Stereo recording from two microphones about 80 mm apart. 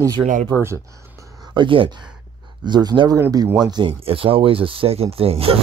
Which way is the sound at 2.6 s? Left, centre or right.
Right.